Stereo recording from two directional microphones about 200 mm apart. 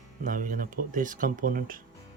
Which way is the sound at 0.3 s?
45° right (ahead or behind).